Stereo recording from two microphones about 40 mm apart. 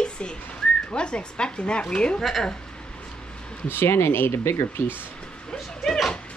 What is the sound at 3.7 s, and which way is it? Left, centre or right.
Speech, left.